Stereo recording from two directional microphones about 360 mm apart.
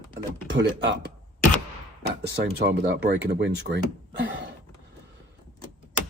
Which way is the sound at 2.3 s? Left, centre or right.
Right.